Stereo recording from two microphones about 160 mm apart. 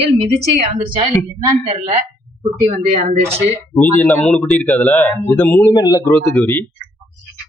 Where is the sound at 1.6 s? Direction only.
50° right (ahead or behind).